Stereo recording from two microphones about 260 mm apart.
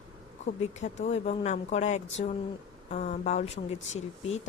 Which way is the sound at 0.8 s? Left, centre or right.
Left.